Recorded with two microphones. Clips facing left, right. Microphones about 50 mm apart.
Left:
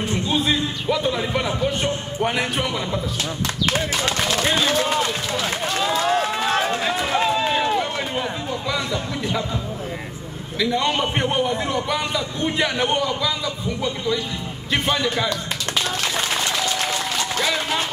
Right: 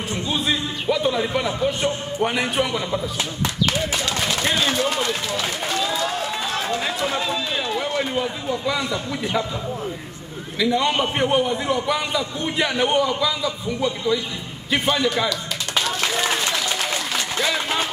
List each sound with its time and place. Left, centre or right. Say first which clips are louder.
0.1 s a man's voice: left 1 dB; centre
4.4 s a sound: left 1 dB; centre
4.7 s run: left 1 dB; centre
6.1 s run: left 5 dB; left
6.8 s run: left 2 dB; centre
7.2 s run: left 5 dB; left
7.8 s a sound: right 2 dB; centre
8.6 s speech: even; centre
10.6 s a man's voice: right 1 dB; centre
17.4 s a sound: right 1 dB; centre